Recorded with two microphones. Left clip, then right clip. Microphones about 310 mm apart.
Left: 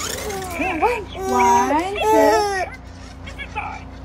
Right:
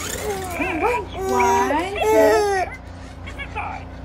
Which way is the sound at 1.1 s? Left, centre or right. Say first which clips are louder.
Left 3 dB; left.